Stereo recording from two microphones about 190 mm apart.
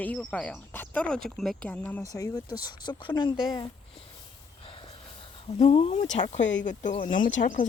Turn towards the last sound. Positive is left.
turn(degrees=45)  # may be behind; listen again after turning